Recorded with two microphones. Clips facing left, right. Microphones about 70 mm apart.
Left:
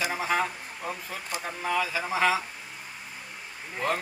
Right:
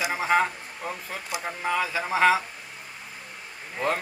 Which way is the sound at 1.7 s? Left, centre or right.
Right.